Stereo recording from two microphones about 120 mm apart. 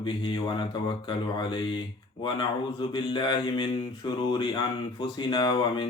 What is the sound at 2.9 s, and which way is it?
Mantra, 40° left (ahead or behind).